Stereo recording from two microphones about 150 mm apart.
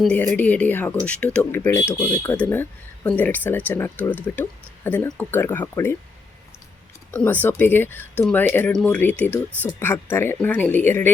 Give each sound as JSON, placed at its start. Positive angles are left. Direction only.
{"t": 0.0, "sound": "speech", "side_deg": 10}
{"t": 7.1, "sound": "speech", "side_deg": 10}